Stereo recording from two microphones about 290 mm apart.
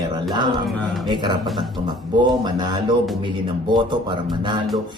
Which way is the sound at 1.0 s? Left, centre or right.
Centre.